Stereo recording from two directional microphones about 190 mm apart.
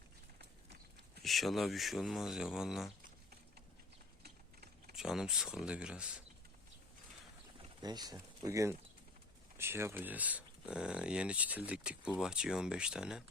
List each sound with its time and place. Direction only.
1.2 s speech: centre (ahead or behind)
4.2 s a sound: 55° right (ahead or behind)
4.9 s speech: 5° right (ahead or behind)
7.8 s speech: 20° right (ahead or behind); by 13.2 s 5° right (ahead or behind)